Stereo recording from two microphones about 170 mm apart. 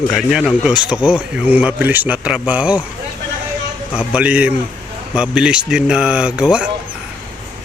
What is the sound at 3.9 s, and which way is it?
Speech, 5° right (ahead or behind).